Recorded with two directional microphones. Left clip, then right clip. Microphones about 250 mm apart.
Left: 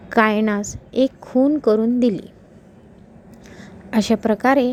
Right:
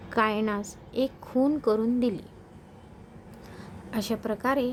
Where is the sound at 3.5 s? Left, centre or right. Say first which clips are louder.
Left 12 dB; centre.